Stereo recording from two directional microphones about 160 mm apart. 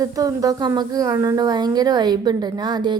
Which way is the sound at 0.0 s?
20° right (ahead or behind).